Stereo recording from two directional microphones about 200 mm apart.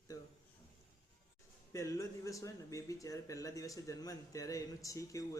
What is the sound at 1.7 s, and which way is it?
Speech, 15° left (ahead or behind).